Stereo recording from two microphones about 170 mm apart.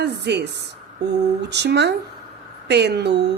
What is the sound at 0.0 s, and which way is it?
A woman's voice, 80° right.